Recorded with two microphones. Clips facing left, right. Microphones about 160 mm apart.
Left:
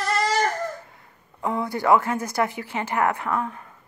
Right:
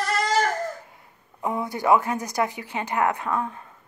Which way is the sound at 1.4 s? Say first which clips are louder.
Left 1 dB; 20° right (ahead or behind).